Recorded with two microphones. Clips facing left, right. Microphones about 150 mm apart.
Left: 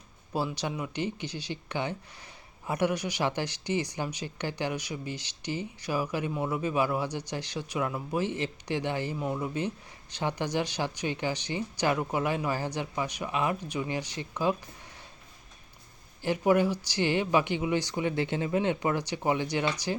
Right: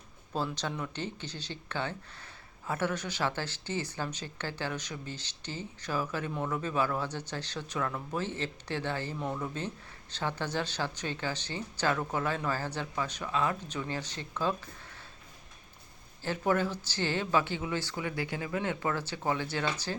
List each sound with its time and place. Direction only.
0.3 s speech: 10° left (ahead or behind)
16.2 s speech: 15° left (ahead or behind)